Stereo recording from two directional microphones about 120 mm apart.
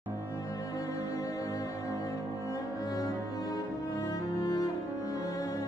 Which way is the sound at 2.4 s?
30° left (ahead or behind).